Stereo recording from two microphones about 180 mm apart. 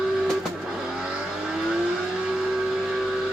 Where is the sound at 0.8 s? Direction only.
5° right (ahead or behind).